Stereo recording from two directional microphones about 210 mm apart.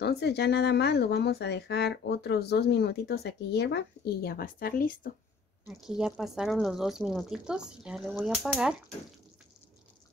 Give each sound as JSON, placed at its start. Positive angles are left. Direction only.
{"t": 0.0, "sound": "speech", "side_deg": 50}
{"t": 5.7, "sound": "speech", "side_deg": 0}